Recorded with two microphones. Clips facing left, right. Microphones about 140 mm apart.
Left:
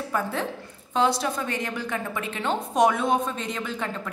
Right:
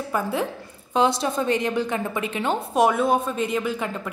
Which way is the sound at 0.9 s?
20° right (ahead or behind).